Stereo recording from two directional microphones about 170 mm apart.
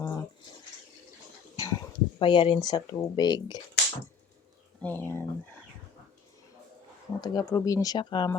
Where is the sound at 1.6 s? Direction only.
20° left (ahead or behind).